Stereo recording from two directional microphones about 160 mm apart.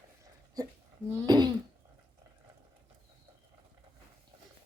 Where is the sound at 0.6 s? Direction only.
20° right (ahead or behind).